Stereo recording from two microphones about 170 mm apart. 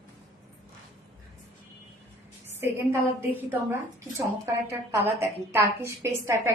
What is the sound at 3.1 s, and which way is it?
A woman's voice, 10° right (ahead or behind).